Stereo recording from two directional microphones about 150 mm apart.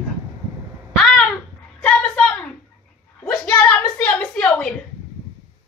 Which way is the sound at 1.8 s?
10° left (ahead or behind).